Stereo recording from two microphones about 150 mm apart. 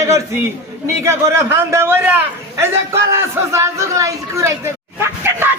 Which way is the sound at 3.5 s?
20° right (ahead or behind).